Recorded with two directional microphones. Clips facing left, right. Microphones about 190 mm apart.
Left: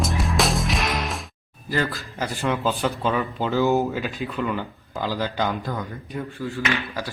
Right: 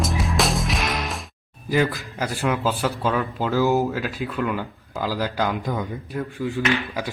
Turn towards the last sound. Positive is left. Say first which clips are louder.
# right 3 dB
turn(degrees=-15)  # may be behind; listen again after turning